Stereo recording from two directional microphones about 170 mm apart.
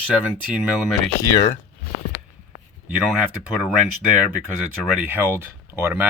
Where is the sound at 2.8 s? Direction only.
5° right (ahead or behind).